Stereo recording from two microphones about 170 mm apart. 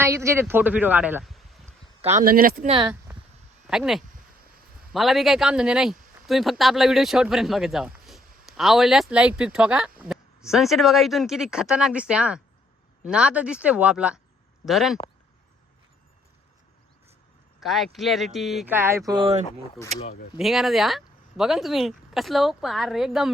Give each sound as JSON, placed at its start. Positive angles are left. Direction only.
{"t": 0.0, "sound": "speech", "side_deg": -15}
{"t": 2.1, "sound": "speech", "side_deg": -60}
{"t": 2.6, "sound": "speech", "side_deg": -35}
{"t": 3.7, "sound": "speech", "side_deg": 0}
{"t": 17.6, "sound": "speech", "side_deg": 0}
{"t": 18.7, "sound": "speech", "side_deg": -15}
{"t": 19.1, "sound": "speech", "side_deg": -30}
{"t": 20.3, "sound": "speech", "side_deg": 0}